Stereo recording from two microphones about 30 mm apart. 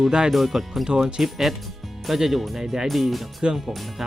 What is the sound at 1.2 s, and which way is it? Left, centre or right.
Speech, centre.